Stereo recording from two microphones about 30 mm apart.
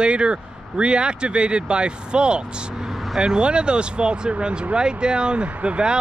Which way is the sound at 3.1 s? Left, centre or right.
Right.